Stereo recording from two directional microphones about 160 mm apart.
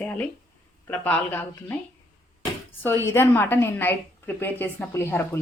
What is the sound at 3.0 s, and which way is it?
A woman's voice, 15° left (ahead or behind).